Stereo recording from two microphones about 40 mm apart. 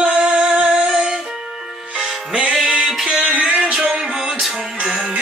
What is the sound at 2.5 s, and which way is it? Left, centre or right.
Music, centre.